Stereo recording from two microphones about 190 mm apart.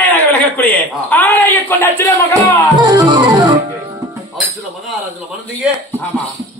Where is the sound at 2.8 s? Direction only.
25° right (ahead or behind).